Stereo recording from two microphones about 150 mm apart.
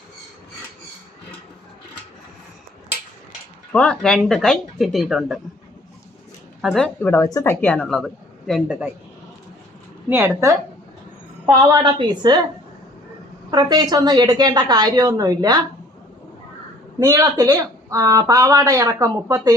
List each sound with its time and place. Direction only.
3.7 s speech: 5° left (ahead or behind)
6.6 s speech: centre (ahead or behind); by 7.5 s 20° left (ahead or behind)
7.6 s speech: 10° left (ahead or behind)
10.1 s a woman's voice: 15° right (ahead or behind)
11.7 s speech: 30° right (ahead or behind)
13.5 s speech: 30° right (ahead or behind)
17.0 s speech: 20° right (ahead or behind)